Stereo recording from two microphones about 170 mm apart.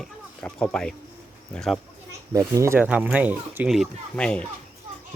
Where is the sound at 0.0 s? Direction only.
5° left (ahead or behind).